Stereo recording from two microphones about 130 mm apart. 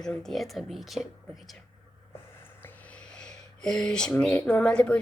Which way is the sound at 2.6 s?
10° left (ahead or behind).